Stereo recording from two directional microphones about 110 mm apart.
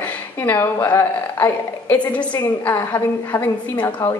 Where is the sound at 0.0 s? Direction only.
20° left (ahead or behind).